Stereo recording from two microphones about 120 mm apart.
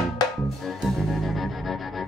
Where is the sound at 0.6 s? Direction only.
Centre (ahead or behind).